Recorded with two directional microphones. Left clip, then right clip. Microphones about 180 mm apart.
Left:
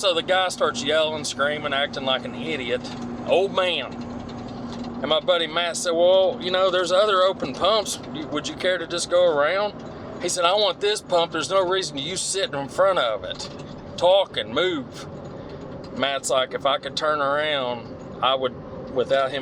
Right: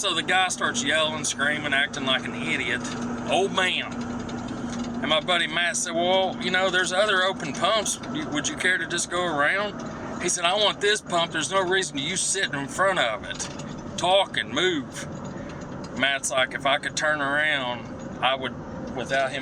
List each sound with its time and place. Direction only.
0.0 s speech: 30° left (ahead or behind)
5.0 s speech: 30° left (ahead or behind)
16.0 s speech: 35° left (ahead or behind)